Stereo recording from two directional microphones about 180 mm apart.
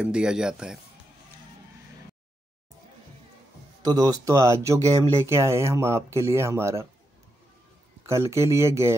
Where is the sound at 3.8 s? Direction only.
20° right (ahead or behind).